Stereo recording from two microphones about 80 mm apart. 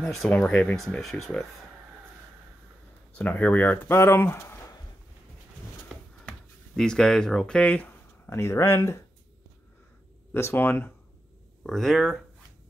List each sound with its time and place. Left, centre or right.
0.0 s speech: centre
0.7 s speech: centre
3.2 s speech: centre; by 4.7 s left
6.2 s speech: centre
8.3 s speech: left
10.3 s speech: left
11.6 s speech: centre